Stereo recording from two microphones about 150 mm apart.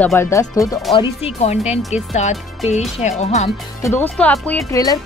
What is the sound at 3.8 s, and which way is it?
Speech, 15° left (ahead or behind).